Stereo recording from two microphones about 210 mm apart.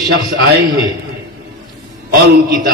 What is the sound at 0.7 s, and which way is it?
Speech, 20° right (ahead or behind).